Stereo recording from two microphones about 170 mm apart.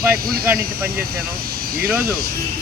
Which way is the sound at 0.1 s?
60° right (ahead or behind).